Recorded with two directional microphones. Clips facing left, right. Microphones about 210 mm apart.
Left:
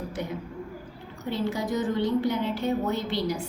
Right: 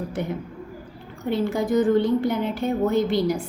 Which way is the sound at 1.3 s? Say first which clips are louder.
Right 6 dB; 55° right (ahead or behind).